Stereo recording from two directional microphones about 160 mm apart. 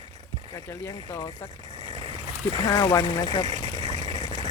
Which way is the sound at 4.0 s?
50° right (ahead or behind).